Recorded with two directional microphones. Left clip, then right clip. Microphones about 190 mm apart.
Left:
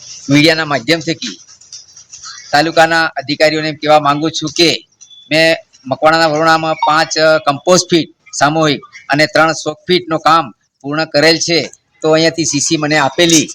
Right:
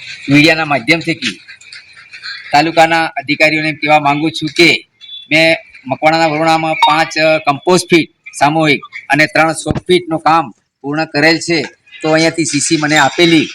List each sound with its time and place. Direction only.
0.3 s speech: 15° left (ahead or behind)
2.5 s speech: 5° left (ahead or behind)
10.1 s speech: 25° left (ahead or behind)